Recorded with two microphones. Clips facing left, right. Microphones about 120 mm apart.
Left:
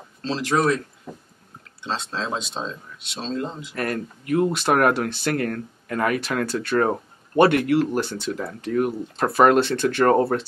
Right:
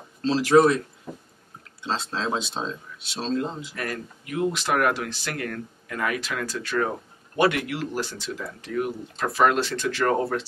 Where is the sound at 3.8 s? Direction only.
45° left (ahead or behind).